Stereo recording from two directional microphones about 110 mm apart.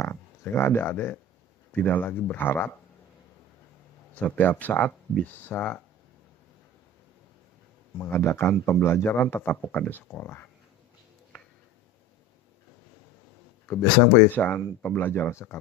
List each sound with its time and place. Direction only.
0.0 s speech: 20° left (ahead or behind)
4.1 s speech: 15° left (ahead or behind)
8.0 s speech: 25° left (ahead or behind)
13.7 s speech: 20° left (ahead or behind)